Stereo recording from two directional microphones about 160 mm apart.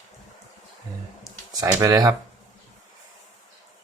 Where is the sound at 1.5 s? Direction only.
20° right (ahead or behind).